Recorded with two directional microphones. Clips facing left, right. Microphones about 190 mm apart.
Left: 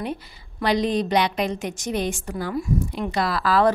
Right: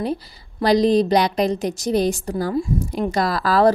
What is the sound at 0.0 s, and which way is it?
Speech, 35° right (ahead or behind).